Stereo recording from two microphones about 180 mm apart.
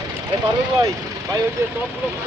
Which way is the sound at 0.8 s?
20° right (ahead or behind).